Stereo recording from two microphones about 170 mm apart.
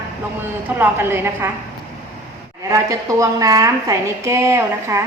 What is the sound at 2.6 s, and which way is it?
A woman's voice, 20° right (ahead or behind).